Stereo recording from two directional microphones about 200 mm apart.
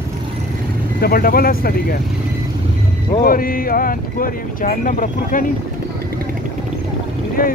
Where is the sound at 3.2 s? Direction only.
45° left (ahead or behind).